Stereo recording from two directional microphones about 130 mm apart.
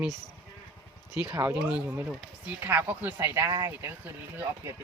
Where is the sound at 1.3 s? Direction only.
10° right (ahead or behind); by 3.9 s 25° right (ahead or behind).